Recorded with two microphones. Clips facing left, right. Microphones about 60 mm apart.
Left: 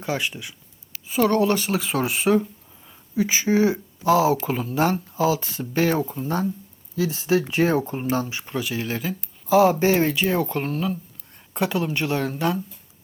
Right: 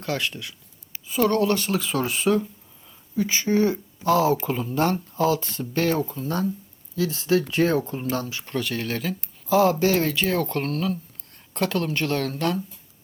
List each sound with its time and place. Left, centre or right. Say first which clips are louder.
0.0 s speech: left 1 dB; centre
8.5 s speech: even; centre
9.7 s speech: left 2 dB; left